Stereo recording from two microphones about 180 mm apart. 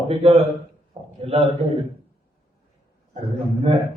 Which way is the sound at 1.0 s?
20° right (ahead or behind).